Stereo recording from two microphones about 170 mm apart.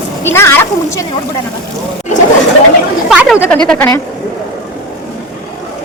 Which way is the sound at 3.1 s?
5° right (ahead or behind).